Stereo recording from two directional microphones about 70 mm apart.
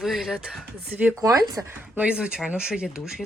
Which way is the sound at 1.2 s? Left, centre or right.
Right.